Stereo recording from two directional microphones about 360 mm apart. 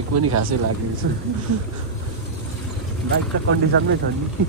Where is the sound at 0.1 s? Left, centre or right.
Right.